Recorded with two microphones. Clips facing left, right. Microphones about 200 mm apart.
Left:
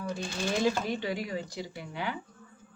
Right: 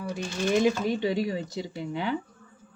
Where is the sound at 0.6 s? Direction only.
20° right (ahead or behind).